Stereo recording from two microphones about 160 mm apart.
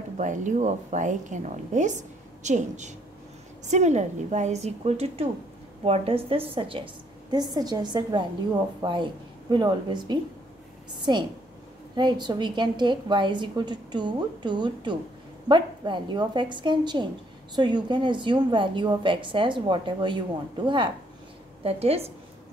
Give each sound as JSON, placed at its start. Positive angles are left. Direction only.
{"t": 0.2, "sound": "a woman's voice", "side_deg": -50}